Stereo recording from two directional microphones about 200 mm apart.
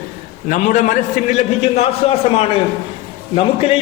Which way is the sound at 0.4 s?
40° left (ahead or behind).